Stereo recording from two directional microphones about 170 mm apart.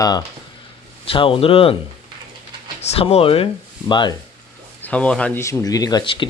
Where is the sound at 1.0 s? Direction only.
30° left (ahead or behind).